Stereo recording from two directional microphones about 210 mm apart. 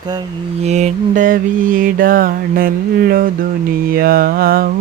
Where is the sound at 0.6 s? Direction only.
35° right (ahead or behind).